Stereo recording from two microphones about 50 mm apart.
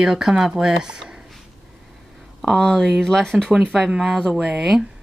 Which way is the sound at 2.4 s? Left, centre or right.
Centre.